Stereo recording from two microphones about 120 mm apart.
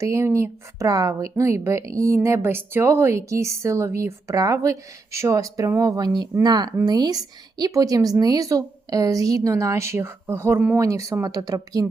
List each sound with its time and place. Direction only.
0.0 s speech: 25° right (ahead or behind)